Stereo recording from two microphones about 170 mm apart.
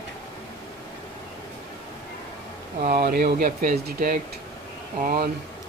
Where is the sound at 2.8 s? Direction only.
65° right (ahead or behind).